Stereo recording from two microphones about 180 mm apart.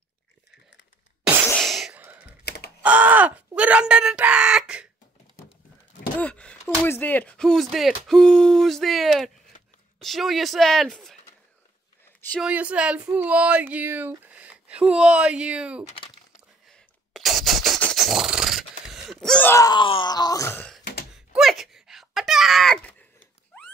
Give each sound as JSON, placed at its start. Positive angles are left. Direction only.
{"t": 1.5, "sound": "a sound", "side_deg": 0}
{"t": 2.4, "sound": "computer keyboard", "side_deg": 60}
{"t": 2.8, "sound": "speech", "side_deg": -10}
{"t": 6.1, "sound": "a sound", "side_deg": 5}
{"t": 6.9, "sound": "speech", "side_deg": 10}
{"t": 12.4, "sound": "speech", "side_deg": -5}
{"t": 16.6, "sound": "a sound", "side_deg": 0}
{"t": 19.5, "sound": "speech", "side_deg": 20}
{"t": 21.3, "sound": "wail", "side_deg": 0}